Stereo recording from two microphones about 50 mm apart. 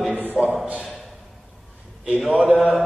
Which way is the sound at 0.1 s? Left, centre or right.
Right.